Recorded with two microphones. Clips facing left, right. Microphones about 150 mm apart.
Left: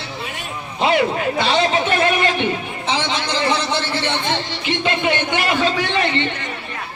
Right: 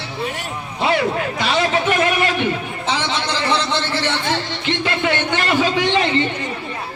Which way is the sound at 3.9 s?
20° left (ahead or behind).